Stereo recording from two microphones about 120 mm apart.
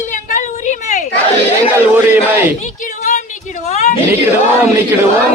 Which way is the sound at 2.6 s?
90° left.